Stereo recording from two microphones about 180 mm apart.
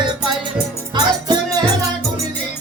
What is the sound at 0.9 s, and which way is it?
Music, 25° right (ahead or behind).